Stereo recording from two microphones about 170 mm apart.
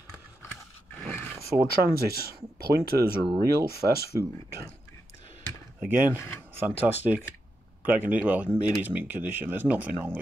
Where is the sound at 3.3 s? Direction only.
70° right (ahead or behind).